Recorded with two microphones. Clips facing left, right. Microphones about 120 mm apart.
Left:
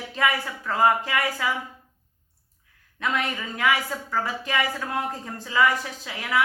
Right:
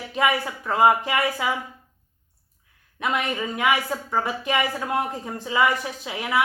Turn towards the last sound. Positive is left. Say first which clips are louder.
# right 3 dB
turn(degrees=-20)  # may be behind; listen again after turning